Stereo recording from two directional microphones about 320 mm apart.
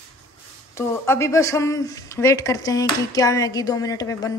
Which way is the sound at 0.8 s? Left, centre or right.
Centre.